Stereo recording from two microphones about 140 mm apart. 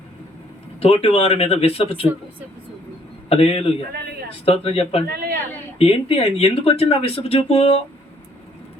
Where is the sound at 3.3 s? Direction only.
45° left (ahead or behind).